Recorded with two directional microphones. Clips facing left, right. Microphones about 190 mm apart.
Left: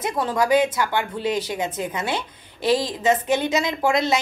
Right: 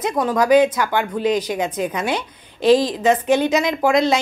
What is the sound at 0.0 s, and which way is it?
Speech, 20° right (ahead or behind).